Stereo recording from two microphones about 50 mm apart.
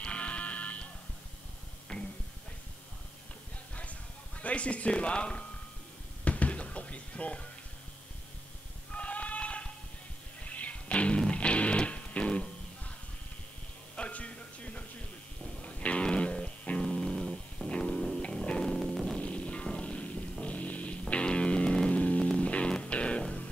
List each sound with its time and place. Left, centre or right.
0.0 s music: left
1.9 s a sound: centre
4.4 s speech: left
6.2 s music: left
8.9 s sheep: left
10.4 s music: left
13.9 s music: left
16.9 s a sound: centre
18.1 s music: centre
18.7 s music: centre
19.1 s music: left